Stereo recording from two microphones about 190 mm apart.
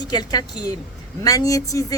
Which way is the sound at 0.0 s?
20° left (ahead or behind).